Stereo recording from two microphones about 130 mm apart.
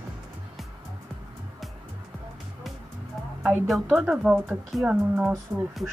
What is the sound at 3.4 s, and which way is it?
Speech, 5° right (ahead or behind).